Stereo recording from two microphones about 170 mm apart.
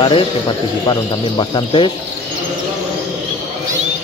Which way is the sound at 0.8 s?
25° left (ahead or behind).